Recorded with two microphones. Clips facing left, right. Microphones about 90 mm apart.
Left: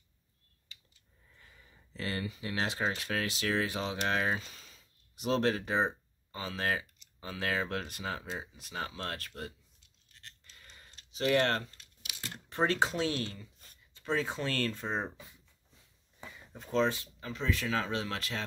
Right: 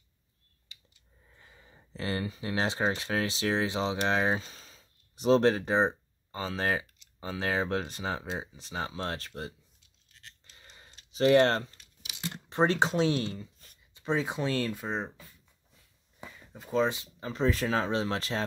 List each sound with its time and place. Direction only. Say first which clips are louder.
1.4 s speech: right 3 dB; 30° right (ahead or behind)
10.5 s sheep: right 1 dB; 25° right (ahead or behind)
11.2 s speech: right 6 dB; 30° right (ahead or behind); by 14.9 s 10° right (ahead or behind)
15.0 s speech: left 3 dB; 20° left (ahead or behind)
16.3 s speech: right 2 dB; 5° right (ahead or behind)
17.2 s speech: right 7 dB; 35° right (ahead or behind)